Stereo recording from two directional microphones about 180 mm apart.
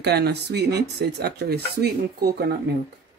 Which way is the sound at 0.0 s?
65° right (ahead or behind).